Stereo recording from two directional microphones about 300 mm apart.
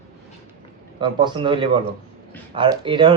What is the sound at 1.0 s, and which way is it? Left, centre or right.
Speech, centre.